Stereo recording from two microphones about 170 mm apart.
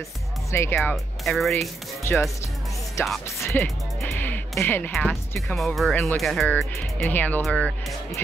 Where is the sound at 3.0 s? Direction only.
15° left (ahead or behind).